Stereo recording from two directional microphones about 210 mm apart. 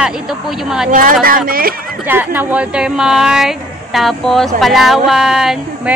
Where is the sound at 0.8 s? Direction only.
40° right (ahead or behind).